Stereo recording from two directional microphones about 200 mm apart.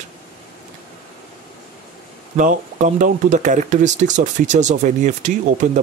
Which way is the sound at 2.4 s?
40° right (ahead or behind).